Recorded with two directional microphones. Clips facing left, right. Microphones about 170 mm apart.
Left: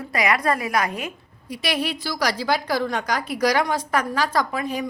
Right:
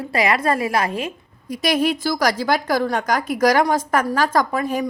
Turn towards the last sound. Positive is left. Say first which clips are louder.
# right 4 dB
turn(degrees=-45)  # may be behind; listen again after turning